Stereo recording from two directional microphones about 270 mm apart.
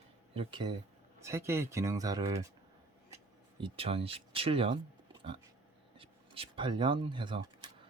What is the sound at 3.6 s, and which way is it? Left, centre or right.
Speech, centre.